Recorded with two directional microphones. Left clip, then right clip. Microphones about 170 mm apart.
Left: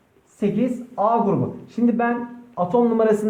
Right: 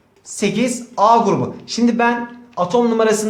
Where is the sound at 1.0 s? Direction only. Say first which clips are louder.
Right 7 dB; 25° right (ahead or behind).